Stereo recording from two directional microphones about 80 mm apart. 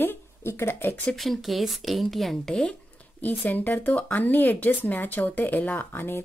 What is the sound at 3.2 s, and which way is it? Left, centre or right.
Speech, left.